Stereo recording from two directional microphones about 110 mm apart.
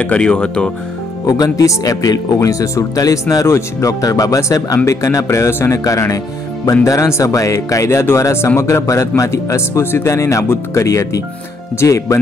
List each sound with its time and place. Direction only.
0.0 s speech: 10° left (ahead or behind)
1.2 s speech: 35° left (ahead or behind)